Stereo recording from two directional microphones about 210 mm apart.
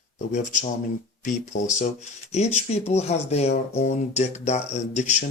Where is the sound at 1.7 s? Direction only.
35° left (ahead or behind).